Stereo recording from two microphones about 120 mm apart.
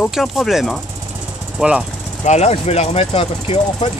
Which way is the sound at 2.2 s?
70° left (ahead or behind).